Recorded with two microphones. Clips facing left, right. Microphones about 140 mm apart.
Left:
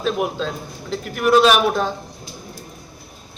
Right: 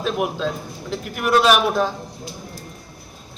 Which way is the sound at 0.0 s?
5° right (ahead or behind).